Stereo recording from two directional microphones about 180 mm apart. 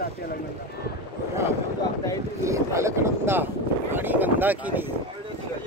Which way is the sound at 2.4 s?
15° right (ahead or behind).